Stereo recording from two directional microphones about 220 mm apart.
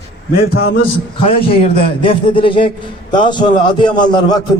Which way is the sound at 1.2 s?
25° left (ahead or behind).